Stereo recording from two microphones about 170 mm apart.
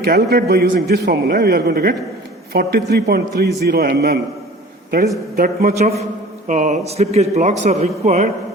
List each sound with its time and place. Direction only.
0.0 s a man's voice: 70° right (ahead or behind)
5.4 s a man's voice: 55° right (ahead or behind)
6.5 s speech: 45° right (ahead or behind)